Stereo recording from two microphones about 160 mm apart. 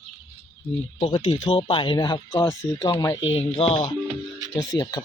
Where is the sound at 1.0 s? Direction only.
35° left (ahead or behind).